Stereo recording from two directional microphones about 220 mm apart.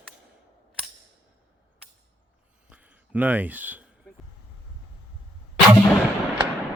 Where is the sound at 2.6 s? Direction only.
5° right (ahead or behind).